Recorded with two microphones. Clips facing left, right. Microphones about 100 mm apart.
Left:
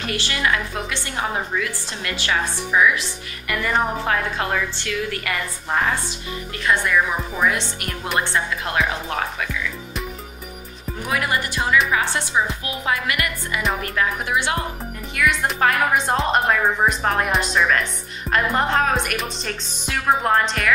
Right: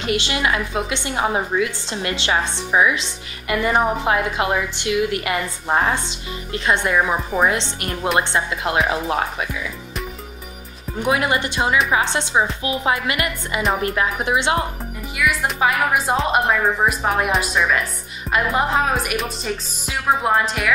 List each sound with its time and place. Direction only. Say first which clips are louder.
0.0 s a woman's voice: right 3 dB; 20° right (ahead or behind)
11.0 s a woman's voice: right 4 dB; 20° right (ahead or behind)
15.1 s speech: even; 5° right (ahead or behind)